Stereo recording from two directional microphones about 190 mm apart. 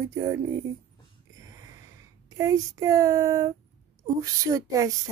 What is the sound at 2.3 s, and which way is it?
Speech, 15° right (ahead or behind).